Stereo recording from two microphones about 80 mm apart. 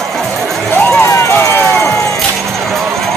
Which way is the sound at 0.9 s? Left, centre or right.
Left.